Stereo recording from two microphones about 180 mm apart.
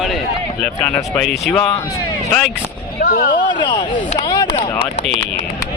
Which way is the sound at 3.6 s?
25° left (ahead or behind).